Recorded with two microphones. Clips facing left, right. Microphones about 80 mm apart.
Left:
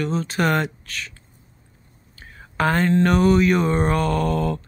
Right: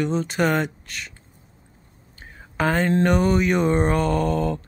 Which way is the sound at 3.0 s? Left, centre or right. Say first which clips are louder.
Left 2 dB; centre.